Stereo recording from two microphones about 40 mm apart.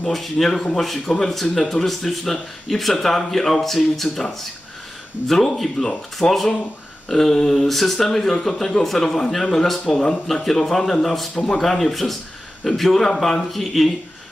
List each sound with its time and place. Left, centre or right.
0.1 s speech: centre
6.2 s speech: left
7.1 s speech: centre
11.3 s speech: centre
11.6 s speech: centre